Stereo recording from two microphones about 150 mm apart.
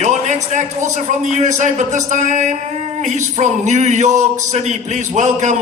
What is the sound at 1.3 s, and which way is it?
A man's voice, 50° right (ahead or behind).